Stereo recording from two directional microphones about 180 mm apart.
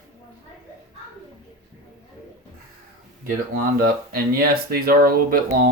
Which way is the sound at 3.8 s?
55° right (ahead or behind).